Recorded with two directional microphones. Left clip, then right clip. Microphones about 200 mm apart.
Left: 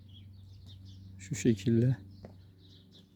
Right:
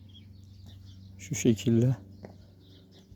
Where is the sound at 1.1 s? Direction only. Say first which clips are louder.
Right 3 dB; 5° right (ahead or behind).